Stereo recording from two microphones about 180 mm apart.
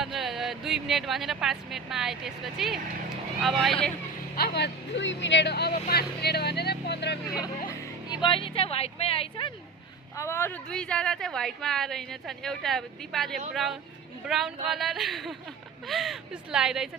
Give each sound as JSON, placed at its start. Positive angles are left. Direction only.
{"t": 0.0, "sound": "speech", "side_deg": 0}
{"t": 4.4, "sound": "speech", "side_deg": 65}
{"t": 7.3, "sound": "a woman's voice", "side_deg": 20}
{"t": 10.2, "sound": "speech", "side_deg": 15}